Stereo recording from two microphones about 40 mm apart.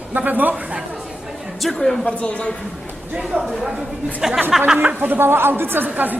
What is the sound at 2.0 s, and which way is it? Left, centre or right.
Speech, left.